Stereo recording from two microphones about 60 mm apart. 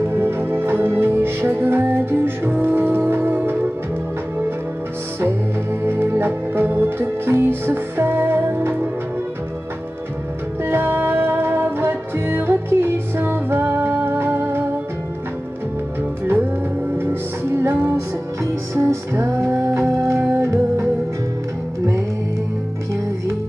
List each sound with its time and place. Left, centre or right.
0.0 s music: right
5.2 s music: right
10.6 s music: right
17.0 s music: right
18.4 s music: right